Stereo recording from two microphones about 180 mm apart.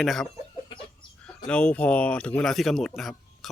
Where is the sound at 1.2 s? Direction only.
5° left (ahead or behind).